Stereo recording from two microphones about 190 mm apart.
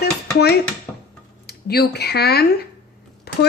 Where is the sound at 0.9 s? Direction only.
10° left (ahead or behind).